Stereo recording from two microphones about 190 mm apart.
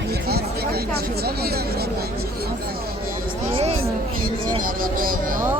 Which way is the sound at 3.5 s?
30° right (ahead or behind).